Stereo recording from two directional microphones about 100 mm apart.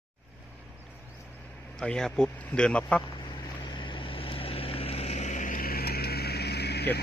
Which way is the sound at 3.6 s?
50° left (ahead or behind).